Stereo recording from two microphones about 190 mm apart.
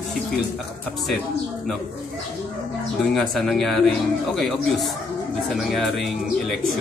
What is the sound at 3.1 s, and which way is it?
A man's voice, centre (ahead or behind).